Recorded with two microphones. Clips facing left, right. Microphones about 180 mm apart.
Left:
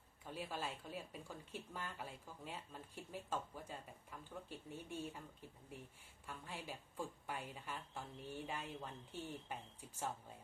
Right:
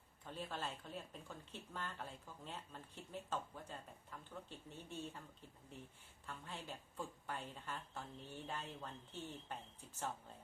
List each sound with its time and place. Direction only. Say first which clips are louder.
0.3 s speech: left 1 dB; 10° left (ahead or behind)
6.2 s speech: left 1 dB; 10° left (ahead or behind)